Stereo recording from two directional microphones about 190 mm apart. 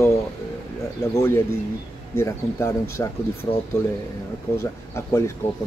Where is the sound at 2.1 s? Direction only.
15° left (ahead or behind).